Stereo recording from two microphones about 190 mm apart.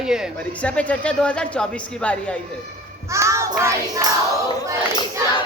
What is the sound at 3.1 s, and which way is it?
Music, 15° right (ahead or behind).